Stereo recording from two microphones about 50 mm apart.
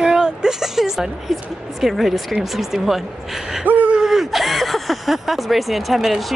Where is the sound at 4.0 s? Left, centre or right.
Centre.